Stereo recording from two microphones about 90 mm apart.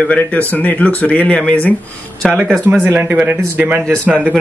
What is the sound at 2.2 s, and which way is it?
Speech, 5° left (ahead or behind).